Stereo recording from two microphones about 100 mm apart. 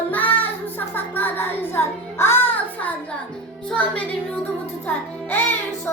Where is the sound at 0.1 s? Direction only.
15° left (ahead or behind).